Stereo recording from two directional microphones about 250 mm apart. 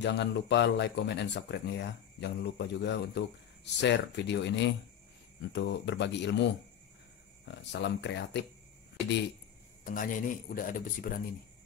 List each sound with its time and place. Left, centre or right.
0.0 s speech: left
7.6 s speech: left
9.8 s speech: left